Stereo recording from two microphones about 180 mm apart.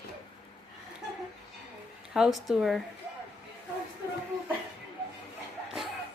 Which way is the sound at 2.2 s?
Centre (ahead or behind).